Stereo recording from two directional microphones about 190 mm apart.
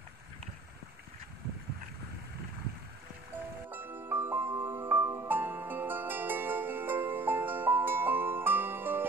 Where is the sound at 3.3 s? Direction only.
10° right (ahead or behind).